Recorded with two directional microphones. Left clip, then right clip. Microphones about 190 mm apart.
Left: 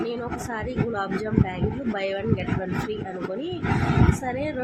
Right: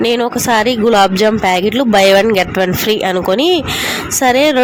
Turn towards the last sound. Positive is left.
turn(degrees=-60)  # may be behind; listen again after turning